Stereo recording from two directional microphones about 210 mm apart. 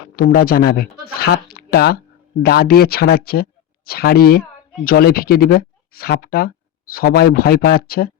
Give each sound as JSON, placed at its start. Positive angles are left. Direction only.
{"t": 0.2, "sound": "speech", "side_deg": 45}